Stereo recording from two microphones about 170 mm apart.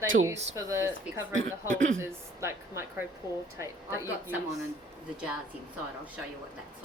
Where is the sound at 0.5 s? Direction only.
20° right (ahead or behind).